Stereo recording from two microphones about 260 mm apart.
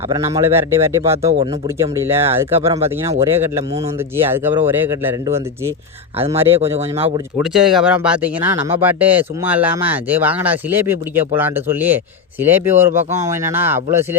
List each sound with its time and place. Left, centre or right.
0.1 s speech: centre
6.4 s speech: right
7.3 s speech: centre